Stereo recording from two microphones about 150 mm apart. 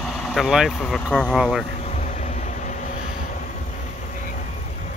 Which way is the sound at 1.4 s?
5° right (ahead or behind).